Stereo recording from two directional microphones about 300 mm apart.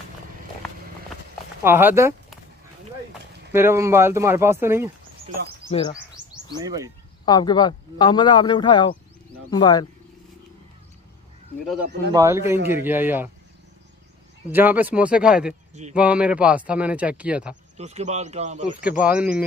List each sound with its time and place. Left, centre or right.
1.6 s speech: centre
3.5 s speech: centre
5.7 s a man's voice: centre
5.9 s bird: centre
7.2 s a man's voice: centre
12.1 s speech: centre
14.5 s a man's voice: centre
17.7 s a man's voice: right
18.8 s a man's voice: centre